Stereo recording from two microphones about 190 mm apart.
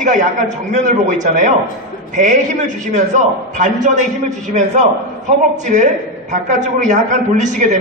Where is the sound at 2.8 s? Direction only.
40° right (ahead or behind).